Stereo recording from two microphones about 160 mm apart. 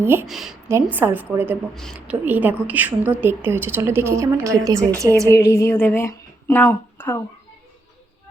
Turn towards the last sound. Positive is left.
turn(degrees=15)  # may be behind; listen again after turning